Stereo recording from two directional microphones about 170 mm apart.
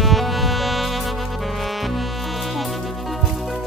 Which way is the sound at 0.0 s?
Centre (ahead or behind).